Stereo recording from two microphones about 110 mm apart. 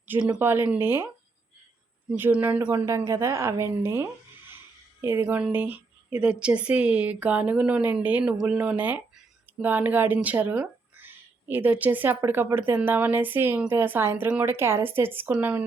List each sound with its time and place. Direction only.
0.3 s speech: 20° right (ahead or behind)
2.0 s speech: 15° right (ahead or behind)
2.8 s speech: 30° right (ahead or behind)